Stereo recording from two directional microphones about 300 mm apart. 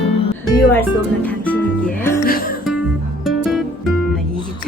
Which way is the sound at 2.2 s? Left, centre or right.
Left.